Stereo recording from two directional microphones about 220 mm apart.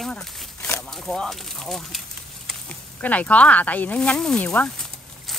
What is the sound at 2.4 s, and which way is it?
Snake, 5° left (ahead or behind).